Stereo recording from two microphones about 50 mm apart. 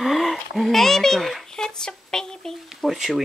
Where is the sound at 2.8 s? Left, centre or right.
Centre.